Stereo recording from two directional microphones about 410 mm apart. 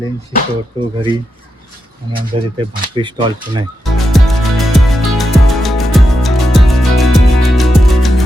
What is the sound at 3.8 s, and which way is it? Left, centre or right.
Music, centre.